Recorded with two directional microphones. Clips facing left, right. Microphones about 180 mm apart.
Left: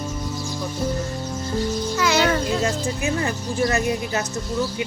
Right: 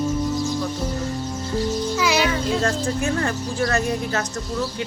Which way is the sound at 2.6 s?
5° left (ahead or behind).